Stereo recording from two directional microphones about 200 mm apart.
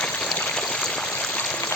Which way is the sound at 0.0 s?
5° left (ahead or behind).